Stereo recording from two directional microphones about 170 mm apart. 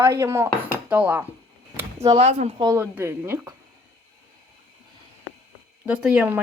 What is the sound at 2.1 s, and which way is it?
Speech, 40° right (ahead or behind).